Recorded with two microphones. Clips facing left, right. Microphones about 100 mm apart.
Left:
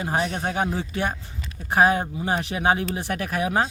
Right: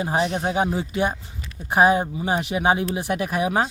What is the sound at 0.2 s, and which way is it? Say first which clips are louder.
Speech: right 5 dB; centre (ahead or behind).